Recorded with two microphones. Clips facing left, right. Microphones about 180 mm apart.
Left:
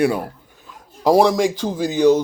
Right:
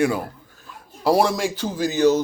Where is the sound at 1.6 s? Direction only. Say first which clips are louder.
Left 3 dB; centre (ahead or behind).